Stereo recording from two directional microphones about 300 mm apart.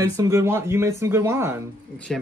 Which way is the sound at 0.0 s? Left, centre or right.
Centre.